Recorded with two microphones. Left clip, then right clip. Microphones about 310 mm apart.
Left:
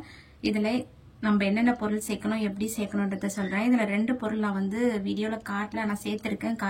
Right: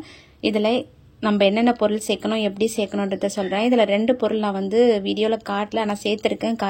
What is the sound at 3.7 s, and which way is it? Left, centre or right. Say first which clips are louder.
Speech: right 10 dB; right.